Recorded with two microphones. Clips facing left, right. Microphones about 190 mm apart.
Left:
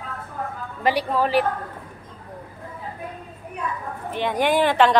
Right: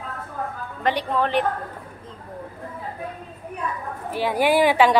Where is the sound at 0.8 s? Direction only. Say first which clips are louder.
Left 1 dB; 10° left (ahead or behind).